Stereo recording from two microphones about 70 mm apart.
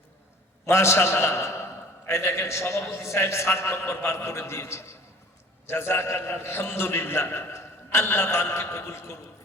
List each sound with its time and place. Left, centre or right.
0.6 s a man's voice: left